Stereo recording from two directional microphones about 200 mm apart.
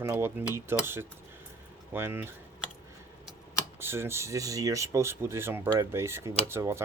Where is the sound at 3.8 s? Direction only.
10° right (ahead or behind).